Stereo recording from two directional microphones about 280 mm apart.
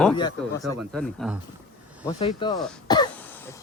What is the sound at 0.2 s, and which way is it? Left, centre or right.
Speech, centre.